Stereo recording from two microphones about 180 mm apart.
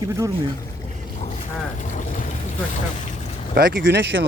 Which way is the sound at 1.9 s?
45° left (ahead or behind).